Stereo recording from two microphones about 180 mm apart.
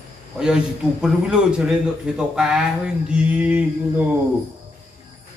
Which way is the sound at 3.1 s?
5° right (ahead or behind).